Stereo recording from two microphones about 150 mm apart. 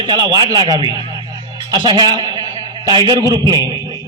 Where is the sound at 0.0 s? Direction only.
30° right (ahead or behind).